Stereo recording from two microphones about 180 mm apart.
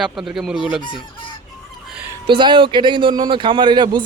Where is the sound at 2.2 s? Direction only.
25° right (ahead or behind).